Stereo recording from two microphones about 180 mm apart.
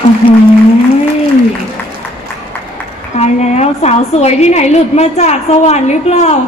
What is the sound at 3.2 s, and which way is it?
A woman's voice, 35° left (ahead or behind).